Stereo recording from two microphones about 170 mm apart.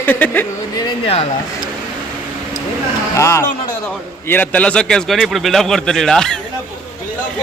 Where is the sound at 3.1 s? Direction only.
15° left (ahead or behind).